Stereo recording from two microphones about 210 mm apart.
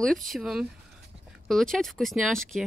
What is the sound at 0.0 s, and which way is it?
Speech, centre (ahead or behind).